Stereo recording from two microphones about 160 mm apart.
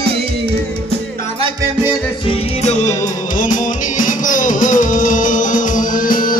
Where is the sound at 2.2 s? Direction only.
45° left (ahead or behind).